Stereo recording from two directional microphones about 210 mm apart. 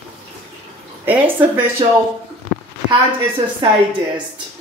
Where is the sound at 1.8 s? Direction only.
30° right (ahead or behind).